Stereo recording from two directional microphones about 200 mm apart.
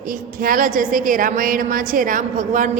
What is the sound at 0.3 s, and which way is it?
A woman's voice, 45° right (ahead or behind).